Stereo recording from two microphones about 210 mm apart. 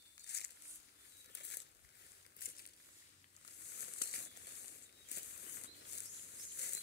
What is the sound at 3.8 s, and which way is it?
Crumpling, 50° left (ahead or behind).